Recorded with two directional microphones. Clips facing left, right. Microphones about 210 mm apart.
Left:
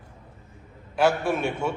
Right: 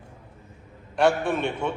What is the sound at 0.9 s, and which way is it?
Speech, 5° left (ahead or behind).